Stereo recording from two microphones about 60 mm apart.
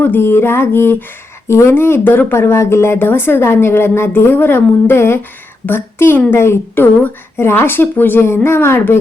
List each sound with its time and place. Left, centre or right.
0.0 s speech: left
1.5 s speech: left
1.7 s speech: left